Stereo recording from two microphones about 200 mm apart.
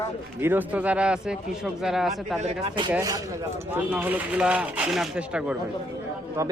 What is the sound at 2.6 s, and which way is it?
Speech, 25° right (ahead or behind).